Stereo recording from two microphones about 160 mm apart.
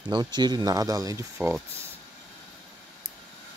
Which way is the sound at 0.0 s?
25° right (ahead or behind).